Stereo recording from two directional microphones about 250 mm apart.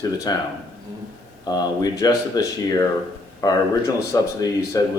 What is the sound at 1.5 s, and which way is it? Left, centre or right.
Speech, centre.